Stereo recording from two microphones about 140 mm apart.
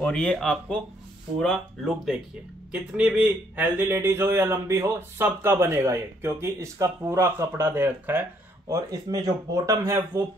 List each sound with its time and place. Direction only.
0.0 s a man's voice: 5° left (ahead or behind); by 10.2 s 20° right (ahead or behind)